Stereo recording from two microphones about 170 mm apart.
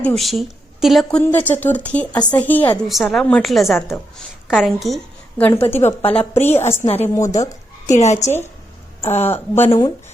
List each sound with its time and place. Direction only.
0.0 s speech: centre (ahead or behind)
1.2 s a woman's voice: 10° left (ahead or behind)
5.4 s speech: 15° left (ahead or behind)
6.0 s a woman's voice: 35° left (ahead or behind)
8.2 s speech: 15° left (ahead or behind)
9.0 s a sound: 40° left (ahead or behind)
9.2 s speech: 10° left (ahead or behind)